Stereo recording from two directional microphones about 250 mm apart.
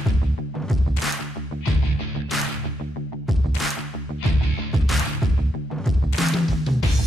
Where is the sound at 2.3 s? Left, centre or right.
Centre.